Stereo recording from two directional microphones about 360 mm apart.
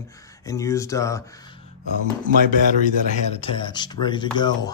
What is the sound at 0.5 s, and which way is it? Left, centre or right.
Speech, centre.